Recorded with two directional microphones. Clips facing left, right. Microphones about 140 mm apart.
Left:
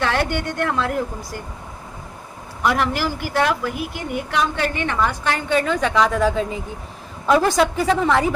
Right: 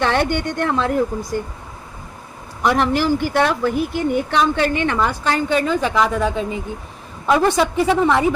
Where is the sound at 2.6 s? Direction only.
25° right (ahead or behind).